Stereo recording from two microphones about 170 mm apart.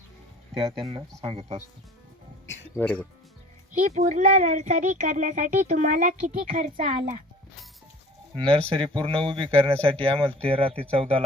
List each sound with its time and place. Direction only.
1.2 s speech: 35° right (ahead or behind)
2.7 s speech: 10° left (ahead or behind)
3.7 s speech: 45° right (ahead or behind)
8.4 s speech: 30° right (ahead or behind)